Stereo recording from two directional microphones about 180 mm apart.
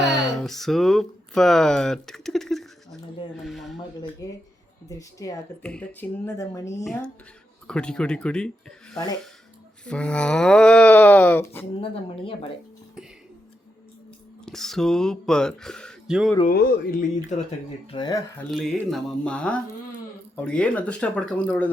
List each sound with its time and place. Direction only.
0.1 s a sound: centre (ahead or behind)
3.4 s speech: centre (ahead or behind)
4.2 s speech: 20° left (ahead or behind)
5.6 s speech: 5° left (ahead or behind)
6.8 s speech: 5° left (ahead or behind)
9.8 s speech: 5° left (ahead or behind)
11.8 s speech: 30° left (ahead or behind)
14.4 s speech: centre (ahead or behind)
16.5 s speech: 55° left (ahead or behind)
17.9 s speech: 25° left (ahead or behind)
18.5 s speech: centre (ahead or behind)